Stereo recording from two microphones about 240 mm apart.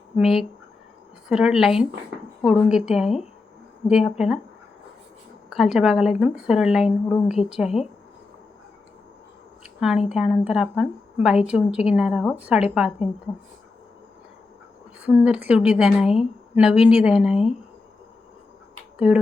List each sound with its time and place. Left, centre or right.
0.2 s a woman's voice: centre
5.5 s a woman's voice: centre
10.1 s a woman's voice: centre
15.0 s a woman's voice: centre
18.9 s speech: centre